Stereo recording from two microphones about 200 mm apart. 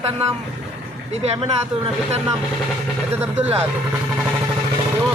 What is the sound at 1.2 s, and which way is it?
Speech, 30° right (ahead or behind).